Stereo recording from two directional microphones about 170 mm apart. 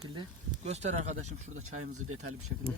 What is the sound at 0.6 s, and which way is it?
Speech, 40° right (ahead or behind).